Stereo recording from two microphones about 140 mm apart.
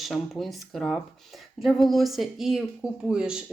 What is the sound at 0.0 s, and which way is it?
Speech, centre (ahead or behind).